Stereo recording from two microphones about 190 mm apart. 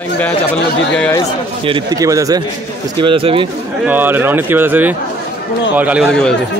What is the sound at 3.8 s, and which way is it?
A man's voice, 10° right (ahead or behind).